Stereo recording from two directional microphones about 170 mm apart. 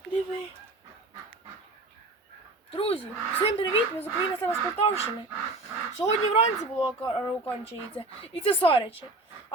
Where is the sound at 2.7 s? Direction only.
35° left (ahead or behind).